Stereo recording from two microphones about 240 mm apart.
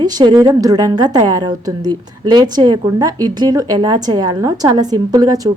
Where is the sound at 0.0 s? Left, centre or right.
Centre.